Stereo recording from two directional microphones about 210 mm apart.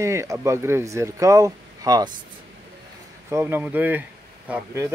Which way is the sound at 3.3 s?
10° right (ahead or behind).